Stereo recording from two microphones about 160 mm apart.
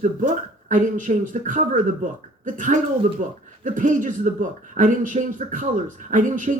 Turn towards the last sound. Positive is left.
turn(degrees=-55)  # may be behind; listen again after turning